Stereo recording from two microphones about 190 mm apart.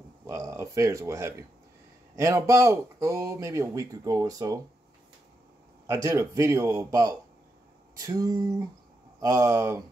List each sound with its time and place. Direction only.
0.3 s speech: 15° right (ahead or behind)
5.9 s speech: 15° right (ahead or behind)
7.9 s a sound: 20° right (ahead or behind)
9.2 s speech: 15° right (ahead or behind)